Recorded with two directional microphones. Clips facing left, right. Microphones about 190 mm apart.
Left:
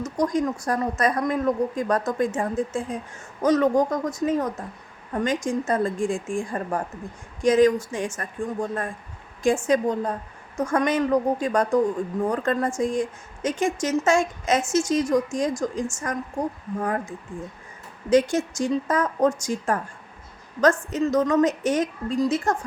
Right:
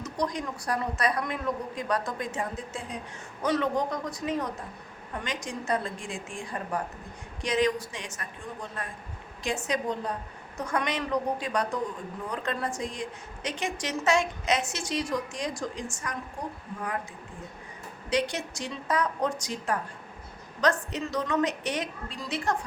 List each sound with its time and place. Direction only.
0.0 s a woman's voice: 45° left (ahead or behind)